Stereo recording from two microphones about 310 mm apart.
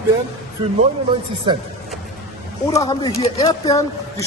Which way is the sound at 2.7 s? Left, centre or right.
Centre.